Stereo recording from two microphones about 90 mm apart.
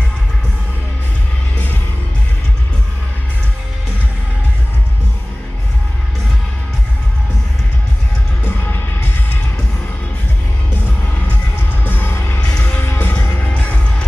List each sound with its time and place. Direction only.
8.5 s music: 25° left (ahead or behind)
11.8 s music: 25° left (ahead or behind)